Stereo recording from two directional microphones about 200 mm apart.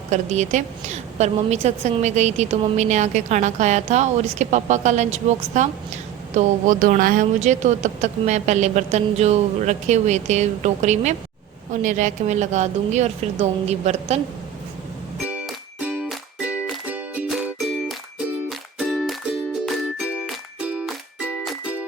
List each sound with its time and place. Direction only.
0.1 s a woman's voice: 35° right (ahead or behind)
15.3 s music: 5° right (ahead or behind)
18.4 s music: centre (ahead or behind)